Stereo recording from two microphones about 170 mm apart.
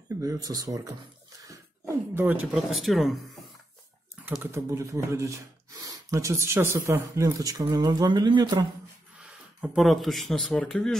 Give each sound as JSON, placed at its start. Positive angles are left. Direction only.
{"t": 0.2, "sound": "speech", "side_deg": -20}
{"t": 2.1, "sound": "speech", "side_deg": -10}
{"t": 4.3, "sound": "speech", "side_deg": -15}
{"t": 9.2, "sound": "speech", "side_deg": -5}